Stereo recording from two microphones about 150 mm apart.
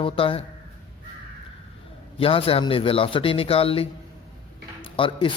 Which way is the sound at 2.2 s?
40° left (ahead or behind).